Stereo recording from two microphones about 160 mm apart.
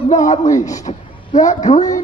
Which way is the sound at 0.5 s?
20° left (ahead or behind).